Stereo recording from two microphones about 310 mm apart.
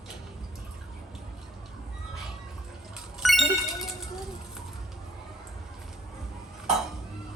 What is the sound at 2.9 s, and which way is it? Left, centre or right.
Ding, centre.